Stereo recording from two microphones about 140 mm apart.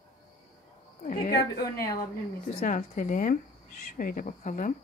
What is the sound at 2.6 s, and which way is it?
Speech, 70° left (ahead or behind).